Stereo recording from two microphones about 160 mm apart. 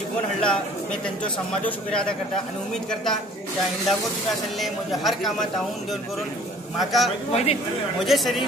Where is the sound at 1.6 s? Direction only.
5° left (ahead or behind).